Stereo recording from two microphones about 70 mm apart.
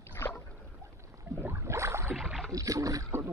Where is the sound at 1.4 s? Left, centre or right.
Right.